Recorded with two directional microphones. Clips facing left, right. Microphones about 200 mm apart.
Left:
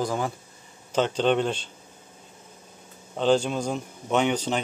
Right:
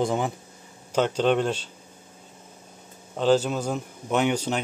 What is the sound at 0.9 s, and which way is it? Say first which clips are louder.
Speech: right 1 dB; 10° right (ahead or behind).